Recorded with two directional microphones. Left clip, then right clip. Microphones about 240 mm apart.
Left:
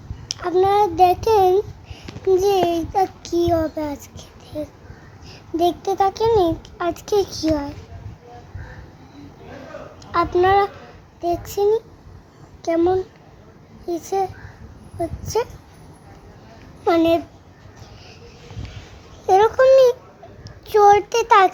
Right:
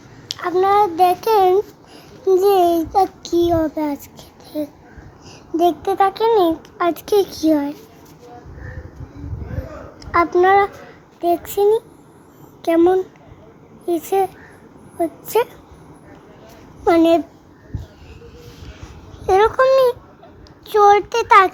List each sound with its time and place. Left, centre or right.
0.3 s a child's voice: centre
10.1 s a child's voice: centre
14.0 s speech: centre
16.8 s a child's voice: centre
19.2 s a child's voice: centre